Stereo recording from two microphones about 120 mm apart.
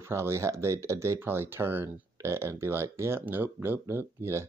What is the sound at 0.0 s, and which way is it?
Speech, 20° right (ahead or behind).